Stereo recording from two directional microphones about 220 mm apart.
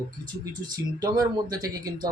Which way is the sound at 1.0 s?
15° right (ahead or behind).